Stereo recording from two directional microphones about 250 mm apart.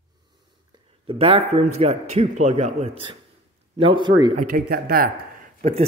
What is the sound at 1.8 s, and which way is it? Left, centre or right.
A man's voice, right.